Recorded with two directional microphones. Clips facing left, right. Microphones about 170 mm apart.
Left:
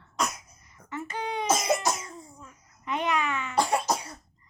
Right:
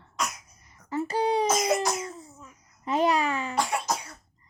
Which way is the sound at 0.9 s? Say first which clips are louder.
Right 8 dB; 35° right (ahead or behind).